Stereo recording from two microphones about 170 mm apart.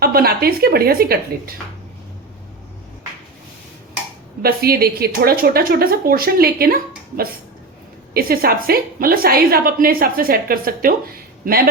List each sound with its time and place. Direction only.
0.0 s a woman's voice: 60° right (ahead or behind)
4.4 s a woman's voice: 65° right (ahead or behind)
8.1 s a woman's voice: 60° right (ahead or behind)